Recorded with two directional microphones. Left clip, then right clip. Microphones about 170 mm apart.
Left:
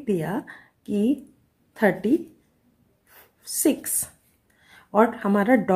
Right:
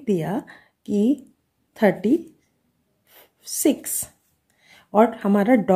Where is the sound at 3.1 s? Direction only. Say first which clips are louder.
Right 2 dB; 30° right (ahead or behind).